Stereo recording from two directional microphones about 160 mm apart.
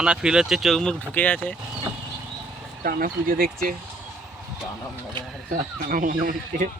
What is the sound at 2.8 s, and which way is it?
Speech, 70° right (ahead or behind).